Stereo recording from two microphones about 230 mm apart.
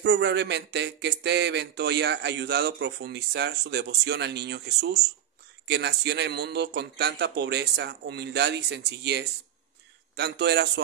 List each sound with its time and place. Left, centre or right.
0.0 s speech: right